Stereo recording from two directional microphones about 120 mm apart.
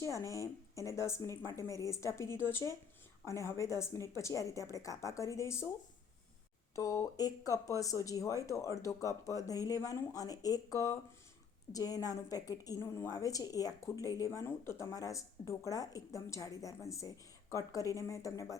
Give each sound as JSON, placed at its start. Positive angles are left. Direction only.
{"t": 0.0, "sound": "speech", "side_deg": 25}
{"t": 6.7, "sound": "speech", "side_deg": 25}